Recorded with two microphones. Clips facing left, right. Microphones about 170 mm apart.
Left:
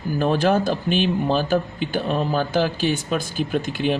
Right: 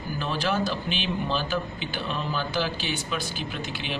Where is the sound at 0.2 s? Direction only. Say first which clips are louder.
Left 8 dB; 50° left (ahead or behind).